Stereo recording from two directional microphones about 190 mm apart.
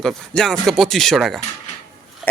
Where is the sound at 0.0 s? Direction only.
Centre (ahead or behind).